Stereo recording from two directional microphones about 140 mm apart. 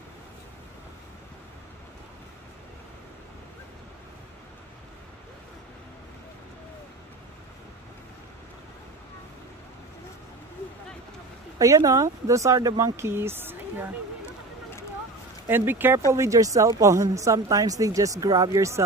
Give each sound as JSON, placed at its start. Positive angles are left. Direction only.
{"t": 11.5, "sound": "a woman's voice", "side_deg": -25}
{"t": 15.4, "sound": "a woman's voice", "side_deg": -15}